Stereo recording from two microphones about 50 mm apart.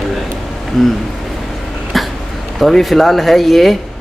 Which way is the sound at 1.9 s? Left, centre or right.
Centre.